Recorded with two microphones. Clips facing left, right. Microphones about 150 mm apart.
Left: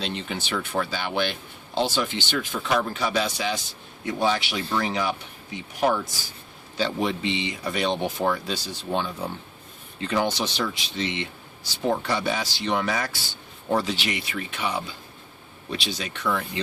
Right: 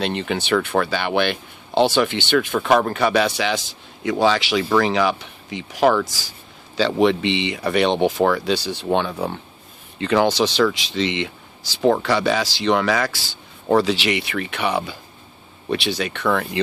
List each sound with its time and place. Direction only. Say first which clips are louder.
0.0 s speech: right 7 dB; 65° right (ahead or behind)
10.0 s speech: right 7 dB; 85° right; by 16.5 s 65° right (ahead or behind)